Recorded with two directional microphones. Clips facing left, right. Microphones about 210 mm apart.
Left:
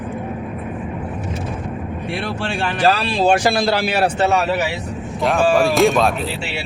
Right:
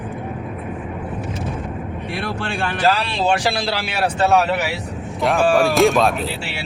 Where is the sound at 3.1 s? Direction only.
45° left (ahead or behind).